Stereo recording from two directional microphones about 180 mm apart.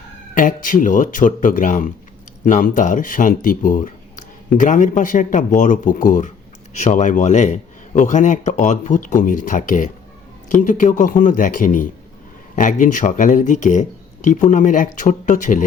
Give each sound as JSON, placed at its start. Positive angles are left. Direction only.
{"t": 0.3, "sound": "a man's voice", "side_deg": 50}